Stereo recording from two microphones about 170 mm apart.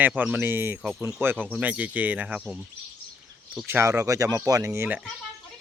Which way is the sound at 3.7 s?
15° right (ahead or behind).